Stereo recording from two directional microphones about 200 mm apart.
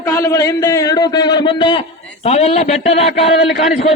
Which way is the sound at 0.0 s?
15° left (ahead or behind).